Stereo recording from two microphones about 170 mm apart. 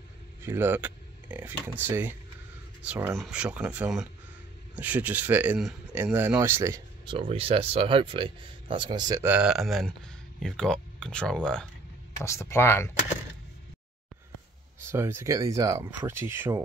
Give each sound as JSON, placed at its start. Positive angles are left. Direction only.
{"t": 0.4, "sound": "speech", "side_deg": -15}
{"t": 7.1, "sound": "speech", "side_deg": -35}
{"t": 9.3, "sound": "speech", "side_deg": -5}
{"t": 12.2, "sound": "speech", "side_deg": 15}
{"t": 14.8, "sound": "speech", "side_deg": -15}